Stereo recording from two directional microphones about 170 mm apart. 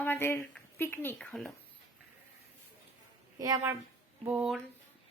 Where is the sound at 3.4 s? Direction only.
20° right (ahead or behind).